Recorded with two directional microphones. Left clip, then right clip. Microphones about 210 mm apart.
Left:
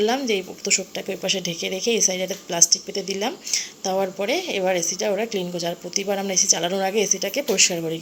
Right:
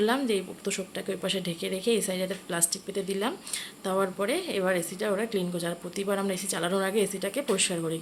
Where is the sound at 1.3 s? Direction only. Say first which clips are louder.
Left 9 dB; 30° right (ahead or behind).